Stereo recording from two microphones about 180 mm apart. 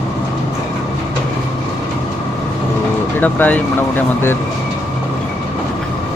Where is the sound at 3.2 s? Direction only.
10° left (ahead or behind).